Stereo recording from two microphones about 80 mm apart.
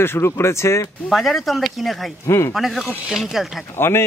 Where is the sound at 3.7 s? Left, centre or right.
Left.